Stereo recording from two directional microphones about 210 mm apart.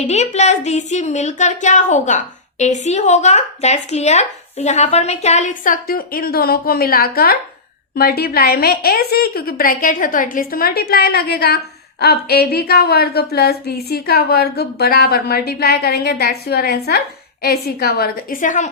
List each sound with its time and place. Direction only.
0.1 s a woman's voice: 30° left (ahead or behind)